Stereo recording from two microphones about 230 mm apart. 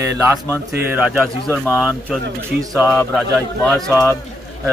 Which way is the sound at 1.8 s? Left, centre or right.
Centre.